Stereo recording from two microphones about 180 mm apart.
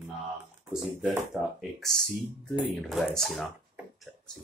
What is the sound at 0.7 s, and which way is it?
Speech, 5° right (ahead or behind).